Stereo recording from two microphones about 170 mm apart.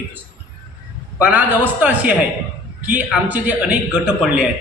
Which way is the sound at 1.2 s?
10° right (ahead or behind).